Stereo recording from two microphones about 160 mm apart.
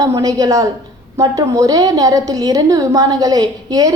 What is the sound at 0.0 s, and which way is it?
A woman's voice, 20° right (ahead or behind).